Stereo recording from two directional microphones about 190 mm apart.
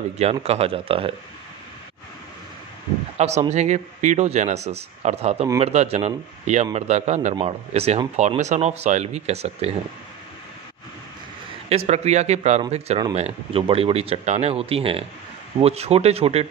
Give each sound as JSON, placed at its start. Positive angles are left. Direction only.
{"t": 0.2, "sound": "speech", "side_deg": -35}
{"t": 3.2, "sound": "speech", "side_deg": -35}
{"t": 11.7, "sound": "speech", "side_deg": -35}